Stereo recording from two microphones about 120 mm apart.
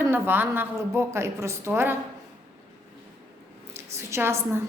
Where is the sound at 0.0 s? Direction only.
15° right (ahead or behind).